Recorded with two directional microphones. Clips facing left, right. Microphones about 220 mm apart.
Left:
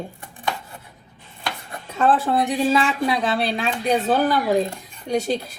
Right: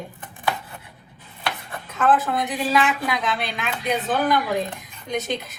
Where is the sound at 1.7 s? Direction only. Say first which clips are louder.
Left 1 dB; 30° left (ahead or behind).